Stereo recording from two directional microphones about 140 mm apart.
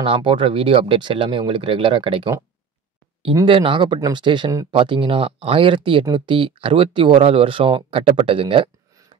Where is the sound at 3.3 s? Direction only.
35° right (ahead or behind).